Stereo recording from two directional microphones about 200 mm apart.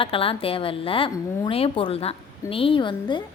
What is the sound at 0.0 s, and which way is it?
A woman's voice, 25° left (ahead or behind).